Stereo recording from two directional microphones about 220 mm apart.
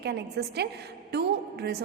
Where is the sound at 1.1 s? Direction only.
45° right (ahead or behind).